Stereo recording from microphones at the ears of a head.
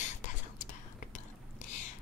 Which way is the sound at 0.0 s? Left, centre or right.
Left.